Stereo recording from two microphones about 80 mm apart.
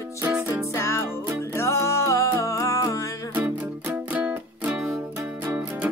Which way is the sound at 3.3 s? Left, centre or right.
Right.